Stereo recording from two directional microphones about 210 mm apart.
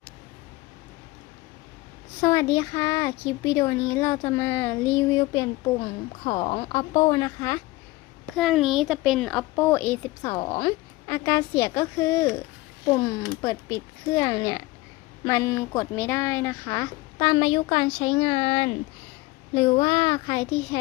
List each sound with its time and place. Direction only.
2.2 s speech: 15° left (ahead or behind)
8.4 s a child's voice: centre (ahead or behind)
10.3 s speech: 20° left (ahead or behind)
19.8 s speech: 25° left (ahead or behind)